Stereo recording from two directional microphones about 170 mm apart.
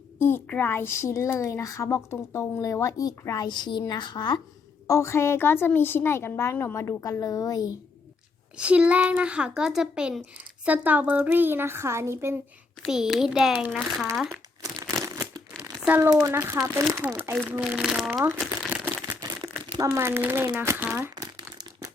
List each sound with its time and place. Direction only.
0.2 s a woman's voice: 15° left (ahead or behind)
8.5 s speech: 5° right (ahead or behind)
12.8 s speech: centre (ahead or behind)
15.0 s crumpling: 20° right (ahead or behind)
16.2 s speech: 15° right (ahead or behind)
18.3 s crumpling: 10° right (ahead or behind)
19.7 s speech: 15° right (ahead or behind)
21.2 s crumpling: 20° right (ahead or behind)